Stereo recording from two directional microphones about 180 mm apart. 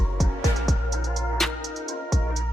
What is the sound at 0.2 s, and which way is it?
Music, centre (ahead or behind).